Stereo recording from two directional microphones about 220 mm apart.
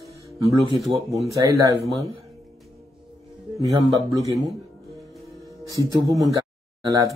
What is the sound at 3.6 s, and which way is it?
Speech, 15° right (ahead or behind).